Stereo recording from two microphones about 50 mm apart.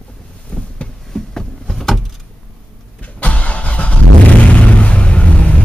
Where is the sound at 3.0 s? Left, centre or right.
Left.